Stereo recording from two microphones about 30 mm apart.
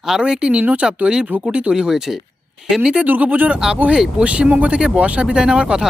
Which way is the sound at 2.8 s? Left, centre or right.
Right.